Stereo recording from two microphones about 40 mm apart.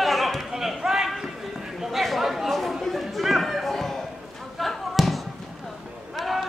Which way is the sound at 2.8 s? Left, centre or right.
Centre.